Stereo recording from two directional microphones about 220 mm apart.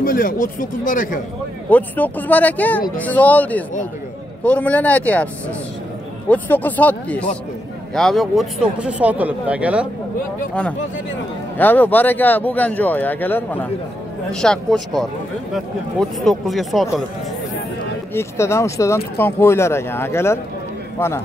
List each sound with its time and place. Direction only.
0.0 s speech: 40° left (ahead or behind)
1.7 s speech: 10° left (ahead or behind)
11.5 s speech: 10° left (ahead or behind)
18.1 s speech: 10° left (ahead or behind)